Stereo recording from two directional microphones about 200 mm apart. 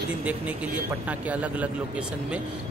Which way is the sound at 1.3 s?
5° right (ahead or behind).